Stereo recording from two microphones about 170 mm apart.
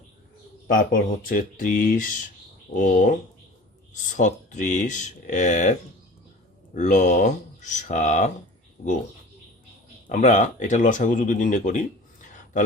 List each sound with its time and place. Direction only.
1.2 s speech: 55° left (ahead or behind)
6.7 s speech: 45° left (ahead or behind)
8.8 s speech: 65° left (ahead or behind)
10.1 s speech: 45° left (ahead or behind)